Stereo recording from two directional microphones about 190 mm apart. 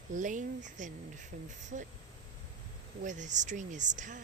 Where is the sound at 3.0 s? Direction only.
40° right (ahead or behind).